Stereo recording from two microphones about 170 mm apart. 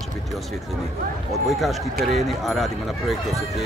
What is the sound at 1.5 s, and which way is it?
Speech, centre (ahead or behind).